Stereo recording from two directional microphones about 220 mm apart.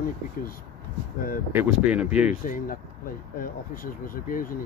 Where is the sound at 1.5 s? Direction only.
10° right (ahead or behind).